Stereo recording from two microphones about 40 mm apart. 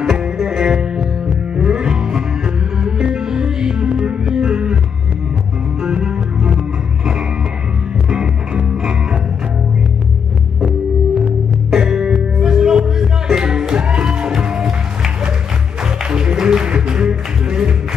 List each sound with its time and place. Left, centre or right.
0.0 s music: centre
5.8 s music: right
8.1 s music: right
11.2 s music: centre